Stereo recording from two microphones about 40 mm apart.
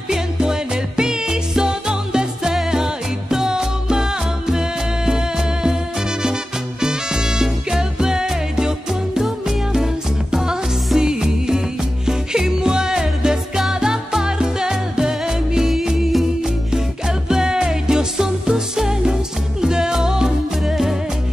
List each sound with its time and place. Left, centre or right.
0.1 s music: centre
6.8 s music: centre
10.3 s music: centre
17.3 s music: centre